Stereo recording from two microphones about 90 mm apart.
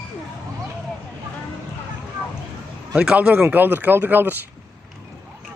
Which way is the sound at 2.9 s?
10° right (ahead or behind).